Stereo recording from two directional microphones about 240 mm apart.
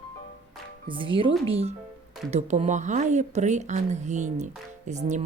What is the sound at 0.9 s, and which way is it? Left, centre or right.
Speech, right.